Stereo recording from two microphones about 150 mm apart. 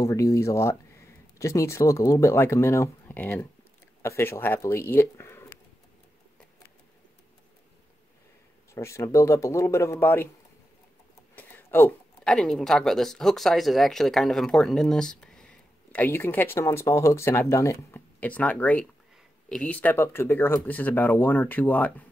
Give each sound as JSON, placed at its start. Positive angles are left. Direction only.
{"t": 0.0, "sound": "speech", "side_deg": 20}
{"t": 8.7, "sound": "speech", "side_deg": 20}
{"t": 11.3, "sound": "speech", "side_deg": 15}